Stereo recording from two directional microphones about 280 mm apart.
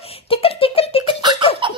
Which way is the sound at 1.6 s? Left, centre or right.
Centre.